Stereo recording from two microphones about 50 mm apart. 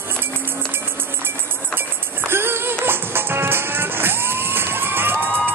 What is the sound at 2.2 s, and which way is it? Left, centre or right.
Music, right.